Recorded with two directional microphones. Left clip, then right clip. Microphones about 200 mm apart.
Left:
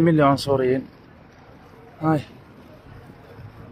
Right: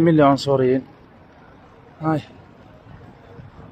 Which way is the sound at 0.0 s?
20° right (ahead or behind).